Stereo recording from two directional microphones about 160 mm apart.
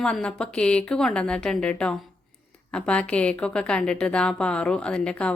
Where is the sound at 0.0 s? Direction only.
5° left (ahead or behind).